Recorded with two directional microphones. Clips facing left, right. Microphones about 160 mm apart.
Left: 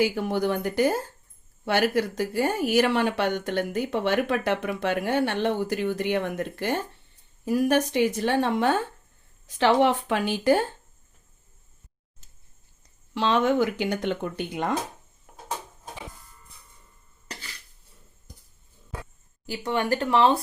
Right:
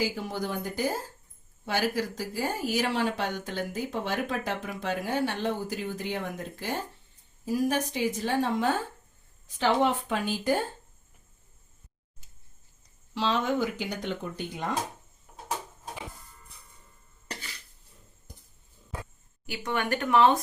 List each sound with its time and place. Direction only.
0.0 s speech: 60° left (ahead or behind)
13.1 s speech: 65° left (ahead or behind)
19.5 s speech: 35° left (ahead or behind)